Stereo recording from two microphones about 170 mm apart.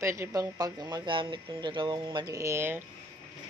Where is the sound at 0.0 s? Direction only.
15° right (ahead or behind).